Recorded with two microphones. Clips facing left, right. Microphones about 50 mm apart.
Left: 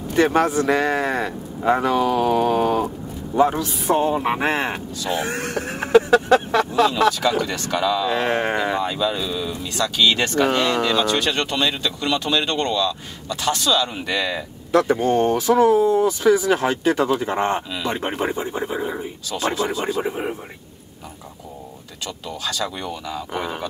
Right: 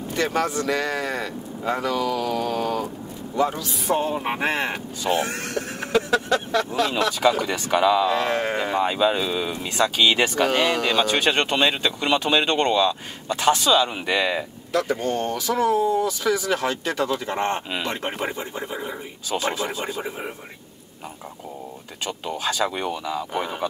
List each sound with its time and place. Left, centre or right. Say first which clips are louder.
0.1 s speech: left 6 dB; left
3.9 s speech: left 4 dB; centre
5.1 s speech: left 1 dB; left
5.9 s speech: left 7 dB; left
7.1 s speech: left 1 dB; centre
8.1 s speech: left 2 dB; left
8.7 s speech: right 2 dB; right
9.8 s speech: even; centre
14.7 s speech: left 6 dB; left
19.5 s speech: left 4 dB; centre
20.0 s speech: left 6 dB; centre
22.4 s speech: right 2 dB; right